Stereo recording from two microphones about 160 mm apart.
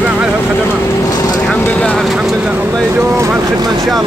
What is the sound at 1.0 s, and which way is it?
Vehicle, 20° left (ahead or behind).